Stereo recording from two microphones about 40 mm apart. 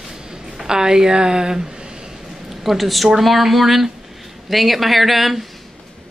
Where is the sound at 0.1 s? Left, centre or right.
Centre.